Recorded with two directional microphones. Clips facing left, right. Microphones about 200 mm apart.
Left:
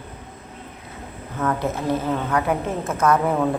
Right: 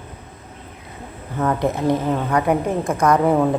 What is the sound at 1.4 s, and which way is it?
A man's voice, 15° right (ahead or behind).